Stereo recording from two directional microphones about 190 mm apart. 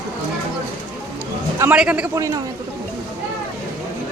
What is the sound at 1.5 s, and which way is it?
Speech, 10° right (ahead or behind).